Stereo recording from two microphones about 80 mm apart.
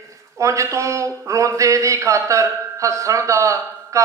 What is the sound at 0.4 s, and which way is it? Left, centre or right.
A man's voice, right.